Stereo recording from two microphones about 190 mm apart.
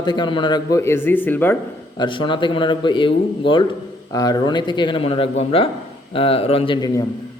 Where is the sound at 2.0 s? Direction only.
25° left (ahead or behind).